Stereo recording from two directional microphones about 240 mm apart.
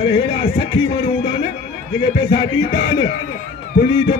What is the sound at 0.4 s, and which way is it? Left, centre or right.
Music, centre.